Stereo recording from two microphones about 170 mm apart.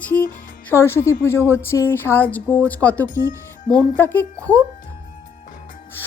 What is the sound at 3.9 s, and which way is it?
Speech, 10° left (ahead or behind).